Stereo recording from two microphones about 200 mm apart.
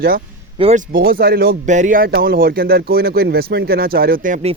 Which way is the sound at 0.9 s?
45° right (ahead or behind).